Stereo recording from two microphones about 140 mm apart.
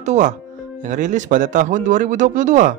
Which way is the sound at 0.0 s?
60° right (ahead or behind).